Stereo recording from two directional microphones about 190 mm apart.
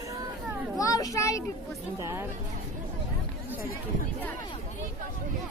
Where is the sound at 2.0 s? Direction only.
15° right (ahead or behind).